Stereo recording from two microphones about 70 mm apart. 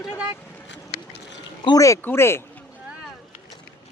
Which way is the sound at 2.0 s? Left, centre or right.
Left.